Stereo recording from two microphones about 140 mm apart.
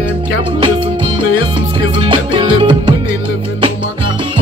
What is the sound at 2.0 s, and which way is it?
Music, 35° right (ahead or behind).